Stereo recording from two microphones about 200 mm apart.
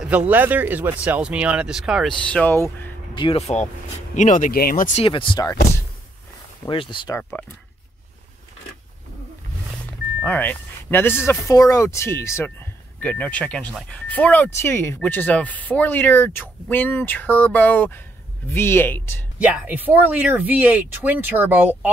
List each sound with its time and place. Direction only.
0.3 s speech: 10° right (ahead or behind); by 2.9 s 10° left (ahead or behind)
3.2 s speech: 30° left (ahead or behind)
5.0 s speech: 25° left (ahead or behind)
6.6 s speech: 25° left (ahead or behind)
7.2 s speech: 5° left (ahead or behind)
10.2 s speech: 10° left (ahead or behind)
19.4 s speech: 5° right (ahead or behind)